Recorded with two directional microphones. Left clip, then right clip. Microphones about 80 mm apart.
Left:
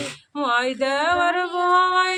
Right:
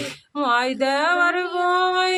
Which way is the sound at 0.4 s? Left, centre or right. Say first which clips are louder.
Right 1 dB; right.